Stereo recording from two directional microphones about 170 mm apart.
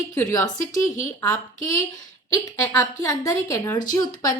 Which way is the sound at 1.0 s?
15° left (ahead or behind).